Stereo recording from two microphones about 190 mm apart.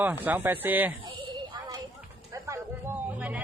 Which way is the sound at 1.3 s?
20° right (ahead or behind).